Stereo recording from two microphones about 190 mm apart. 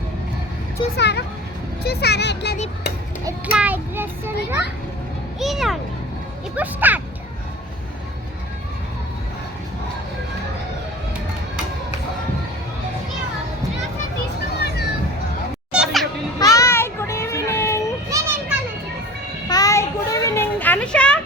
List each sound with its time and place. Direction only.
0.9 s speech: 65° left (ahead or behind)
3.2 s a child's voice: 10° right (ahead or behind)
5.4 s a child's voice: centre (ahead or behind)
15.7 s children playing: centre (ahead or behind)
16.4 s child singing: 15° left (ahead or behind)
18.1 s children playing: 10° right (ahead or behind)
19.5 s a sound: 20° left (ahead or behind)